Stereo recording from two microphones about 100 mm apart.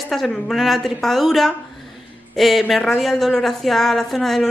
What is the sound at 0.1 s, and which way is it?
A woman's voice, centre (ahead or behind).